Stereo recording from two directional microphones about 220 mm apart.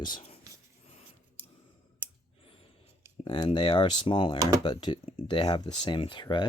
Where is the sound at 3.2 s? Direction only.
20° left (ahead or behind).